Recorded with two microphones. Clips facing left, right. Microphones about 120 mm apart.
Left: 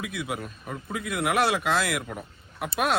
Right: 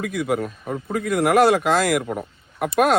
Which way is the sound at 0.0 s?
50° right (ahead or behind).